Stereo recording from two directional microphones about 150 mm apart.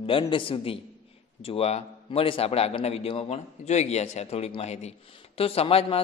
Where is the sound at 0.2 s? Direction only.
35° left (ahead or behind).